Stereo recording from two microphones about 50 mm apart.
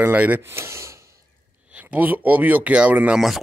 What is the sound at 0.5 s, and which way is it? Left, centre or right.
Speech, right.